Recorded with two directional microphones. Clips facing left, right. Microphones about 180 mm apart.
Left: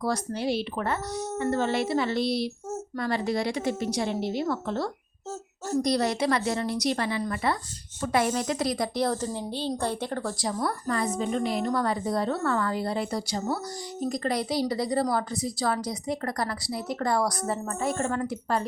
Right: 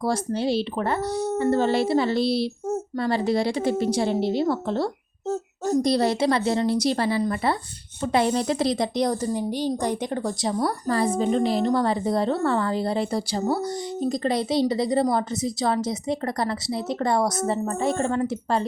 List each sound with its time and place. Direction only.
0.0 s a woman's voice: 30° right (ahead or behind)
10.6 s a woman's voice: 35° right (ahead or behind)